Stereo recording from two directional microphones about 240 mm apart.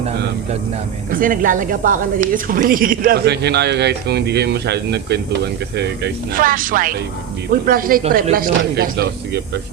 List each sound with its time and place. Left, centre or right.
1.1 s a woman's voice: right